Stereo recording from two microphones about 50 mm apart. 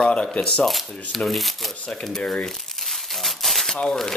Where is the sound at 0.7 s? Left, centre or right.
Centre.